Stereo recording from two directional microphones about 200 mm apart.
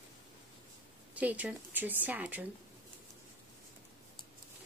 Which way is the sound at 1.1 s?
10° right (ahead or behind).